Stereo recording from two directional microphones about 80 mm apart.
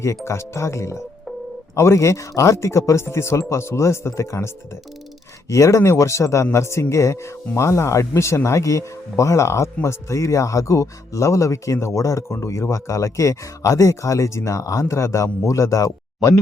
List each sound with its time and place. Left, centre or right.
0.3 s speech: left